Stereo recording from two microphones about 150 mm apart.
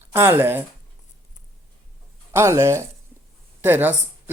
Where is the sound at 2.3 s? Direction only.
20° right (ahead or behind).